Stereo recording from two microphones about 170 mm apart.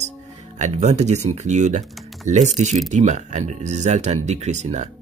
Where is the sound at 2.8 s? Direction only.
45° right (ahead or behind).